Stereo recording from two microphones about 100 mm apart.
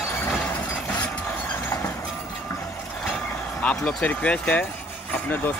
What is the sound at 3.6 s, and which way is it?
Speech, 10° left (ahead or behind).